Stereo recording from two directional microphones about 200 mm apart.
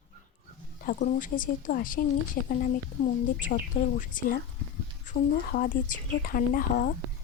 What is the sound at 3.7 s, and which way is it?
Speech, 45° left (ahead or behind).